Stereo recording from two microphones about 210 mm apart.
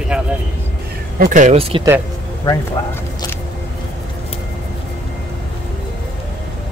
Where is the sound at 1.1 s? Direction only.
40° right (ahead or behind).